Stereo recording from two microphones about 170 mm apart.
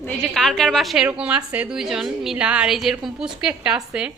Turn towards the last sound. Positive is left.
turn(degrees=-5)  # may be behind; listen again after turning